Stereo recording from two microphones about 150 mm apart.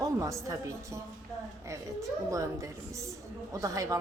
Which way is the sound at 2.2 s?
20° right (ahead or behind).